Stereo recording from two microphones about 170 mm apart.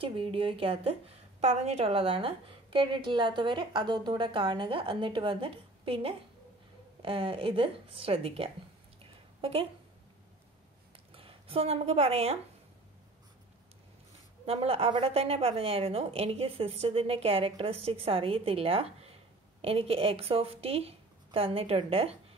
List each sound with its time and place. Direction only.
0.0 s a woman's voice: 30° right (ahead or behind)
9.0 s a sound: 35° right (ahead or behind)
11.1 s a woman's voice: 35° right (ahead or behind)
14.4 s a woman's voice: 35° right (ahead or behind)